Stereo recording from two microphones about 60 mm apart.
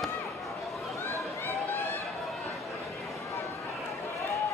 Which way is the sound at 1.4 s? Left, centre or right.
Left.